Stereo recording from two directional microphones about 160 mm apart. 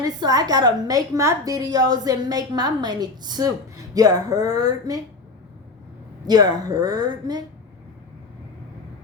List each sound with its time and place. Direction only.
0.0 s a woman's voice: 25° right (ahead or behind)
6.2 s a woman's voice: 25° right (ahead or behind)